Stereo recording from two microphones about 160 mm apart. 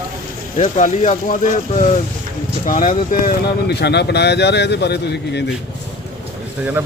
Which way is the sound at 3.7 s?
90° left.